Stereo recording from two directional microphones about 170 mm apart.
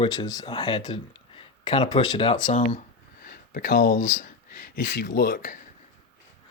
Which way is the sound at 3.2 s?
60° left (ahead or behind).